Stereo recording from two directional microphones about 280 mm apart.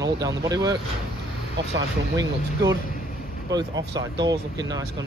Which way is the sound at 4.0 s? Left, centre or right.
Centre.